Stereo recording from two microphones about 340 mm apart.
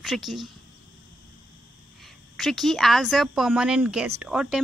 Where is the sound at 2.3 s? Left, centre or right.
Centre.